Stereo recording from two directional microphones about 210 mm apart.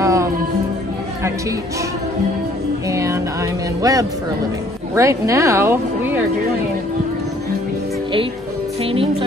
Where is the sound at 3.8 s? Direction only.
15° right (ahead or behind).